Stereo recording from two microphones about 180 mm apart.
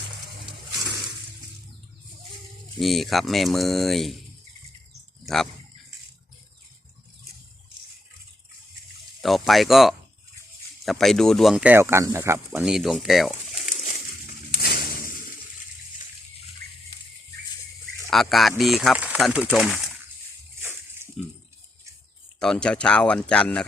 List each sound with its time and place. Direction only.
2.7 s speech: centre (ahead or behind)
5.2 s a sound: centre (ahead or behind)
9.2 s speech: centre (ahead or behind)
12.6 s speech: centre (ahead or behind)
13.7 s pigeon: 45° left (ahead or behind)
14.5 s a sound: 60° left (ahead or behind)
18.1 s speech: centre (ahead or behind)
22.4 s speech: 5° left (ahead or behind)